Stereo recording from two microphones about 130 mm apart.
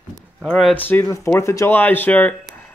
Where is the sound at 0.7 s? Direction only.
15° left (ahead or behind).